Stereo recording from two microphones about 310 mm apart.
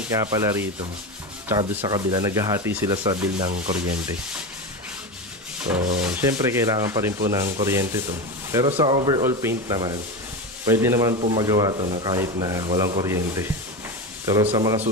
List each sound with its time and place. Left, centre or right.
0.1 s speech: centre
3.3 s rub: right
5.6 s rub: centre
5.9 s speech: centre